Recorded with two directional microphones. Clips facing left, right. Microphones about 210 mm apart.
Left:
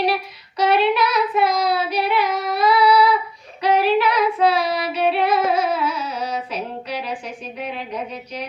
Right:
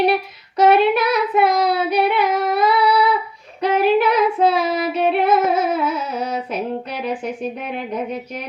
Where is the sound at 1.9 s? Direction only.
50° right (ahead or behind).